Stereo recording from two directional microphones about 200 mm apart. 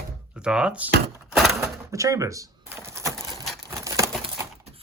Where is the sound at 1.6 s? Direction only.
15° right (ahead or behind).